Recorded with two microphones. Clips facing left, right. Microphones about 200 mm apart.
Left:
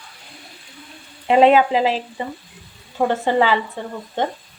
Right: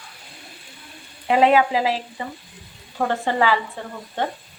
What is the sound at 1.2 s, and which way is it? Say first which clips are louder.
Frying: left 3 dB; 25° left (ahead or behind).